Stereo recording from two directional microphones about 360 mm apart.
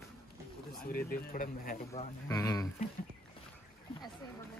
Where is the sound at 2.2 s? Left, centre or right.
Centre.